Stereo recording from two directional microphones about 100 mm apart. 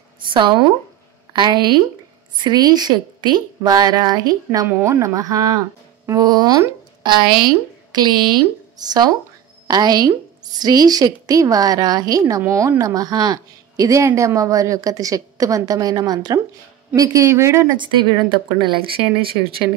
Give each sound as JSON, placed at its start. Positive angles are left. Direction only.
{"t": 0.3, "sound": "a woman's voice", "side_deg": -55}
{"t": 17.6, "sound": "speech", "side_deg": -50}